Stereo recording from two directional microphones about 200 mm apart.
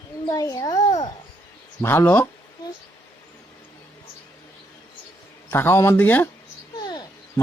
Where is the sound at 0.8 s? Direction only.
30° left (ahead or behind).